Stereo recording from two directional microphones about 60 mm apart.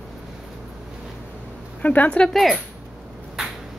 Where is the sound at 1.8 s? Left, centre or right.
Left.